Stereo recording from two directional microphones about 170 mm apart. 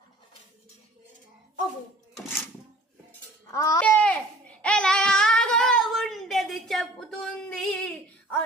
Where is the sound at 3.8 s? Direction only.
5° left (ahead or behind).